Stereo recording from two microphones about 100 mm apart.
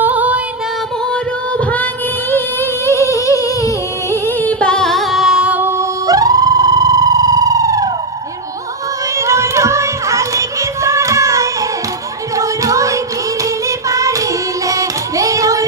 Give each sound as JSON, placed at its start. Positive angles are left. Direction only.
{"t": 0.0, "sound": "music", "side_deg": -15}
{"t": 2.3, "sound": "humming", "side_deg": 25}
{"t": 4.4, "sound": "music", "side_deg": 15}
{"t": 6.0, "sound": "theremin", "side_deg": -40}
{"t": 9.2, "sound": "music", "side_deg": -30}